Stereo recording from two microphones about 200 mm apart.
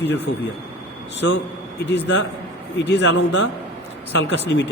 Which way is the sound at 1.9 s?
60° left (ahead or behind).